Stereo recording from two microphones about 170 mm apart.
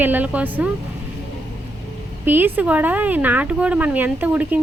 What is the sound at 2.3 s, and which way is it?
Speech, 10° right (ahead or behind).